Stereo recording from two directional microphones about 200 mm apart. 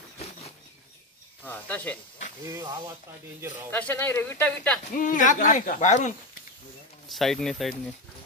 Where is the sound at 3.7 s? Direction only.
10° left (ahead or behind).